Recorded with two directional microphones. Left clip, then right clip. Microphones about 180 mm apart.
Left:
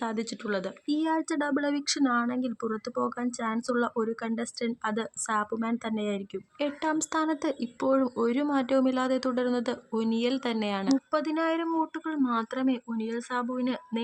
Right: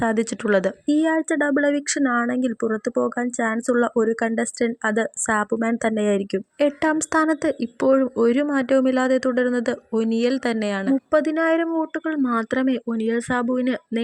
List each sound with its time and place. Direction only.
0.0 s speech: 30° right (ahead or behind)
0.9 s speech: 20° right (ahead or behind)